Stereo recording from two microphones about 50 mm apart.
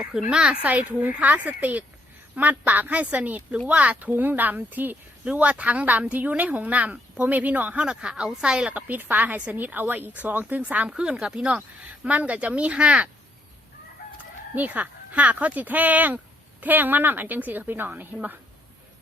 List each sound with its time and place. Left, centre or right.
0.1 s speech: centre
0.6 s speech: right
5.2 s speech: right
8.0 s speech: centre
8.7 s speech: right
14.5 s speech: right